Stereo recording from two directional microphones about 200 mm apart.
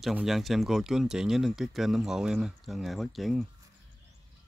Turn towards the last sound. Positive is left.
turn(degrees=0)  # may be behind; listen again after turning